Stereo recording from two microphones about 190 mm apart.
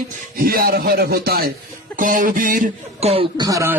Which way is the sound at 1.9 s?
45° right (ahead or behind).